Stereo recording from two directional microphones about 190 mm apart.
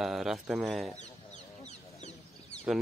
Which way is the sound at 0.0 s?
Centre (ahead or behind).